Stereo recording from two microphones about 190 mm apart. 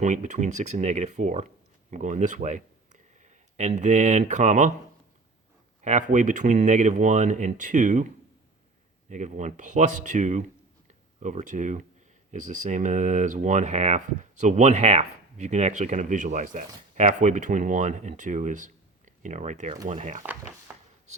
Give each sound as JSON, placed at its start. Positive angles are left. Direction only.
{"t": 0.0, "sound": "speech", "side_deg": -40}
{"t": 5.8, "sound": "speech", "side_deg": -40}
{"t": 9.0, "sound": "speech", "side_deg": -40}